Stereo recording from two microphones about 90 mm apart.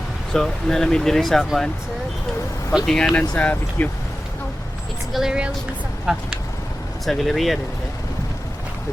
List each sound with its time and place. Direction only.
0.3 s speech: 5° left (ahead or behind)
2.8 s speech: 5° left (ahead or behind)
5.1 s a woman's voice: 5° right (ahead or behind)